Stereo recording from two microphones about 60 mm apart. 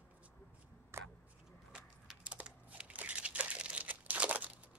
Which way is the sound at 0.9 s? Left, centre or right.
Right.